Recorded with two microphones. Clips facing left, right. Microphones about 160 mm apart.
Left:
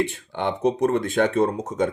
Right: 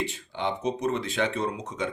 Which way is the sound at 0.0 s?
55° left (ahead or behind).